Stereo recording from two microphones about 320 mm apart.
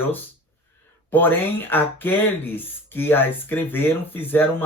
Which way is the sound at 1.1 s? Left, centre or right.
Centre.